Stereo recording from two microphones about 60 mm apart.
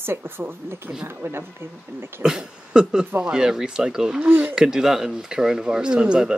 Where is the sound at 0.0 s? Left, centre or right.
Right.